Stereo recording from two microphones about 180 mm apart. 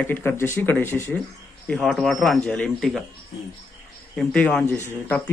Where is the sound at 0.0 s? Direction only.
10° left (ahead or behind).